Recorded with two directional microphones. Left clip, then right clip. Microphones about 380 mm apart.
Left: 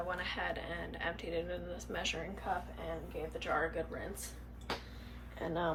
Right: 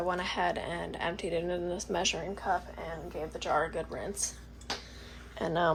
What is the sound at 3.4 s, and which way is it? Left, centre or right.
Speech, centre.